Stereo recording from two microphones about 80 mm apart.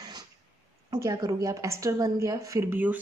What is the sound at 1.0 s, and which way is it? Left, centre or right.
A woman's voice, right.